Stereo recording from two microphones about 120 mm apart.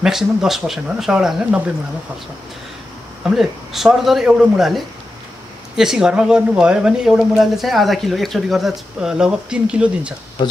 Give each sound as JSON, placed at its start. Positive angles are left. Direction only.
{"t": 0.0, "sound": "speech", "side_deg": -5}
{"t": 3.3, "sound": "speech", "side_deg": 0}
{"t": 10.4, "sound": "speech", "side_deg": 35}